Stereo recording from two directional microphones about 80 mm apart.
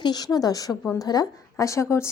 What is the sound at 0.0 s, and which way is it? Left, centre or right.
A woman's voice, left.